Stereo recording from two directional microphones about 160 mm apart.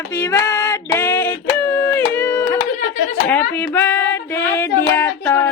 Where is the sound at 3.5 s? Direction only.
10° left (ahead or behind).